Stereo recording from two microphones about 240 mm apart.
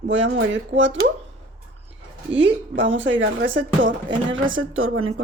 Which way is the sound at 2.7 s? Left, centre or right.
Right.